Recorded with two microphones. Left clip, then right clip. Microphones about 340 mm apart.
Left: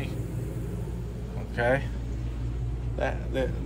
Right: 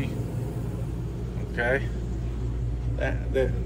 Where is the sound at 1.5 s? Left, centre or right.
Centre.